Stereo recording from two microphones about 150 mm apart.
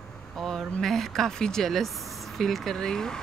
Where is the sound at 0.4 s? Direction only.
5° left (ahead or behind).